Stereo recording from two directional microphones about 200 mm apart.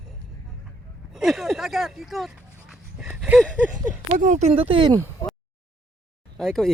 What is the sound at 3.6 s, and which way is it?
Speech, 10° right (ahead or behind).